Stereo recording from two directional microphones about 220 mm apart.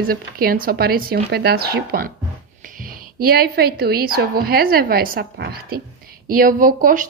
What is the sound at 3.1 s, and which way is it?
A woman's voice, 45° right (ahead or behind).